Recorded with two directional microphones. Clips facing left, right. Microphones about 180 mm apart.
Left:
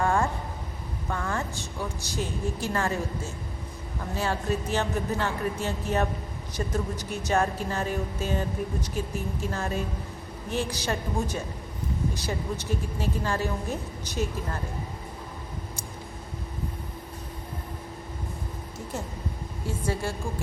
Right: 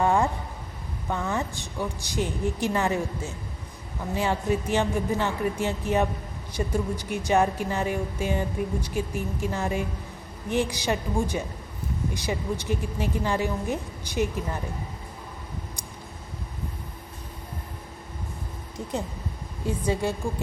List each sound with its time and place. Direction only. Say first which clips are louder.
0.0 s a sound: right 3 dB; 20° right (ahead or behind)
1.1 s music: right 3 dB; 15° right (ahead or behind)
19.6 s a woman's voice: right 4 dB; 20° right (ahead or behind)